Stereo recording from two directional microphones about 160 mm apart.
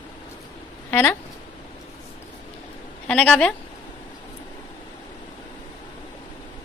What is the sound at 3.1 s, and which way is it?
Speech, 5° left (ahead or behind).